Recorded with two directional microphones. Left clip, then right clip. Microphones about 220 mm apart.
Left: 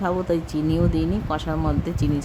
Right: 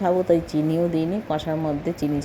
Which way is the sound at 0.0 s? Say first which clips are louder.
Right 4 dB; centre (ahead or behind).